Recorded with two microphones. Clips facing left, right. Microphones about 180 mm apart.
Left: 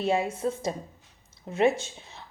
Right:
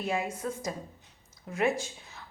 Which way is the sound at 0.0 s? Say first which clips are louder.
Left 6 dB; 25° left (ahead or behind).